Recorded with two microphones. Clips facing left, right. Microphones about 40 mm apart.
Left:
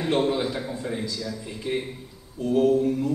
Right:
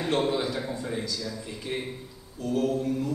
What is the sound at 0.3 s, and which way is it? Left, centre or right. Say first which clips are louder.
A man's voice: left 2 dB; centre.